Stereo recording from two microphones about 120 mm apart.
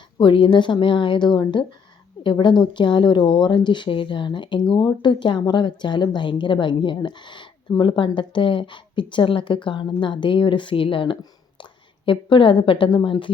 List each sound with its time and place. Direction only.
0.2 s a woman's voice: 45° left (ahead or behind)